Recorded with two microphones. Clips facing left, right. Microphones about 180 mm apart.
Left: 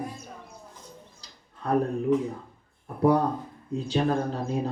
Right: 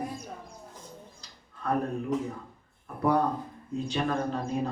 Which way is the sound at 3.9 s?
35° left (ahead or behind).